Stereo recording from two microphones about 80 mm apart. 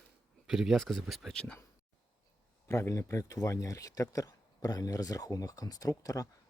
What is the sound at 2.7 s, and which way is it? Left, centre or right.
Speech, left.